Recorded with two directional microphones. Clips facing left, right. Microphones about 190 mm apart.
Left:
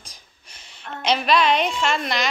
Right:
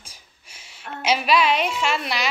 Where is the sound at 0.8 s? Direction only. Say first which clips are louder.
Even; 5° right (ahead or behind).